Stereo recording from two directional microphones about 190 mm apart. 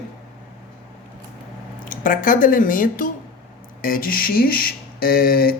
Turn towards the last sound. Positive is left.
turn(degrees=50)  # may be behind; listen again after turning